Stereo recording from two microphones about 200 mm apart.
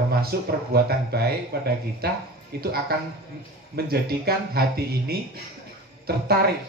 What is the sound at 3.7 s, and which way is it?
Speech, 50° right (ahead or behind).